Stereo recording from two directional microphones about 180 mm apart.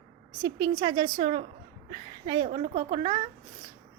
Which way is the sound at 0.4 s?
20° right (ahead or behind).